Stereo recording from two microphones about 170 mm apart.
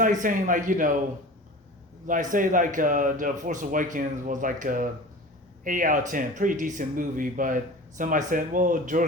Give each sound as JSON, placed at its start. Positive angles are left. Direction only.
{"t": 0.0, "sound": "speech", "side_deg": -50}
{"t": 2.0, "sound": "speech", "side_deg": -50}